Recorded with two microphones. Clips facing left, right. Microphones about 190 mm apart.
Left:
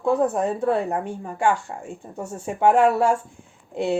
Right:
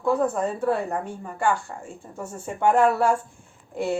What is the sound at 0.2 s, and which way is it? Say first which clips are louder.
A woman's voice: left 2 dB; 15° left (ahead or behind).